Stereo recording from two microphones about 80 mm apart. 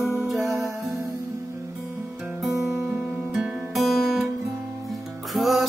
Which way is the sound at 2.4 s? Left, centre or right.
Centre.